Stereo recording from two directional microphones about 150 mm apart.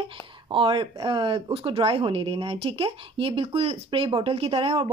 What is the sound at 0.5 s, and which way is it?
Speech, 35° right (ahead or behind).